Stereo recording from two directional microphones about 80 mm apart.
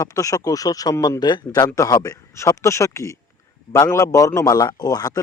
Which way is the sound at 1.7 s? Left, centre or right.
Left.